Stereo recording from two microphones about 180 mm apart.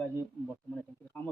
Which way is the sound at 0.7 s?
5° left (ahead or behind).